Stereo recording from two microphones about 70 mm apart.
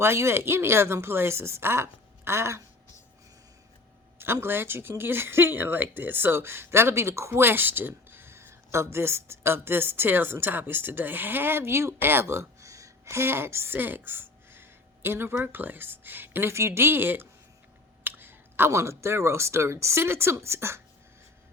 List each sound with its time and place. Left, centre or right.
0.0 s speech: right
4.2 s speech: right